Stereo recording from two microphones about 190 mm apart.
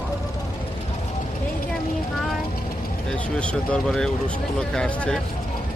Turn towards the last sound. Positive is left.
turn(degrees=5)  # may be behind; listen again after turning